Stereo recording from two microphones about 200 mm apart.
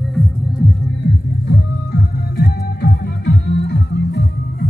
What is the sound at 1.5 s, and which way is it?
Music, 50° left (ahead or behind).